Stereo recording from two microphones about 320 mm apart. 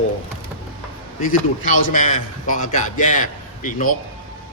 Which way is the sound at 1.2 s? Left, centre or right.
Left.